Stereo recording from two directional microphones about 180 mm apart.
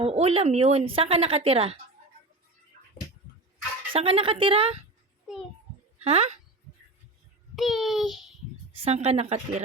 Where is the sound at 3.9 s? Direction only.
30° right (ahead or behind).